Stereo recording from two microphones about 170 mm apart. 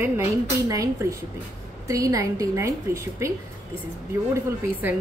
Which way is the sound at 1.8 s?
20° right (ahead or behind).